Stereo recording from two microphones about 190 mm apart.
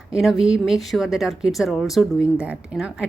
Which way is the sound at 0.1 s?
Centre (ahead or behind).